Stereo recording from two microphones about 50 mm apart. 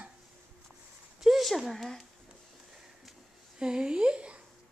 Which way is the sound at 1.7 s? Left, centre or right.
Centre.